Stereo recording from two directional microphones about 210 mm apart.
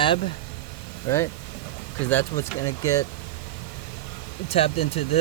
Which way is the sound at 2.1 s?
10° left (ahead or behind).